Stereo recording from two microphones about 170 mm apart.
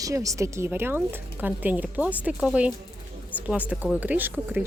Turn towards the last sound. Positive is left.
turn(degrees=-10)  # may be behind; listen again after turning